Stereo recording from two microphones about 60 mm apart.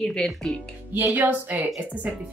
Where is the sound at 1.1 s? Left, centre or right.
Right.